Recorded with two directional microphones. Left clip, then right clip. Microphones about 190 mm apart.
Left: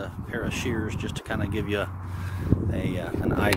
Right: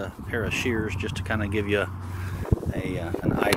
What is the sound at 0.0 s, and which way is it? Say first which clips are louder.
Speech: right 2 dB; centre (ahead or behind).